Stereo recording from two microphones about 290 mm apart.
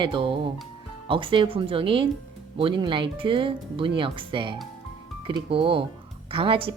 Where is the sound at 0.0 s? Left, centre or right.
Centre.